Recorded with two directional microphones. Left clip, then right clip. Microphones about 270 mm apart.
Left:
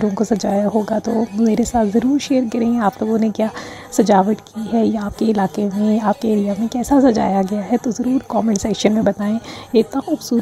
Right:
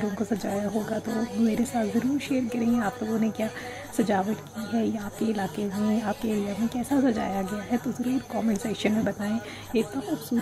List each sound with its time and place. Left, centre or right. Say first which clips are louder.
0.0 s speech: left 11 dB; left